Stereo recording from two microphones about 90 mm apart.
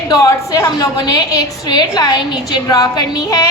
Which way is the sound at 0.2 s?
35° left (ahead or behind).